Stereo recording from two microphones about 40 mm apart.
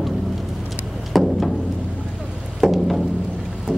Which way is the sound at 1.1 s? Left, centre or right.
Centre.